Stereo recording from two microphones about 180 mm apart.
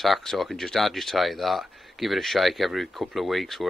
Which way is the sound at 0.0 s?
Centre (ahead or behind).